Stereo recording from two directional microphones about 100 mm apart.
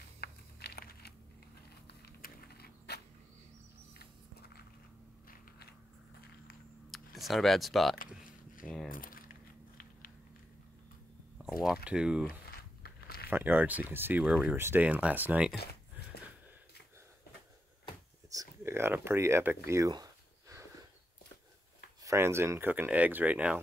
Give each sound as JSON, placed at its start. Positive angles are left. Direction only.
{"t": 6.9, "sound": "computer keyboard", "side_deg": 0}
{"t": 8.6, "sound": "a sound", "side_deg": 5}
{"t": 11.3, "sound": "speech", "side_deg": -5}
{"t": 13.3, "sound": "speech", "side_deg": -20}
{"t": 14.2, "sound": "speech", "side_deg": -10}
{"t": 18.6, "sound": "speech", "side_deg": -25}
{"t": 19.9, "sound": "a sound", "side_deg": -35}
{"t": 22.0, "sound": "speech", "side_deg": -30}